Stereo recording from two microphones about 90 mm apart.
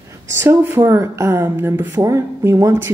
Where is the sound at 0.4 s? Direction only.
30° right (ahead or behind).